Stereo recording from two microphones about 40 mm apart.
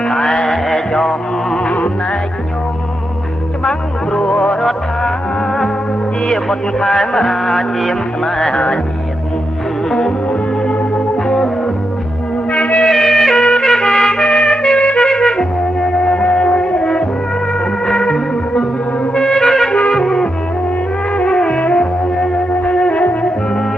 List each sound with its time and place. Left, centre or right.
0.0 s music: centre
3.6 s music: left
6.2 s music: centre
8.5 s music: left
10.6 s organ: left
11.3 s music: centre
12.5 s music: left
12.9 s music: centre
21.3 s music: left